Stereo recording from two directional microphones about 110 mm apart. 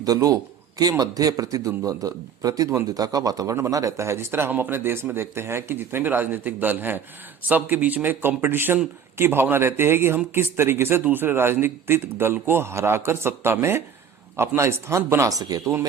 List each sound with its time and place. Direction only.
0.0 s a man's voice: 35° right (ahead or behind)